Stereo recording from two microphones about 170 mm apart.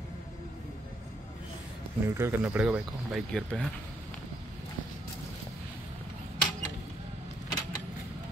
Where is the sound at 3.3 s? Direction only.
5° left (ahead or behind).